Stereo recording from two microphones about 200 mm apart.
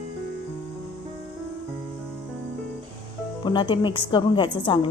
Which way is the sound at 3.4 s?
25° left (ahead or behind).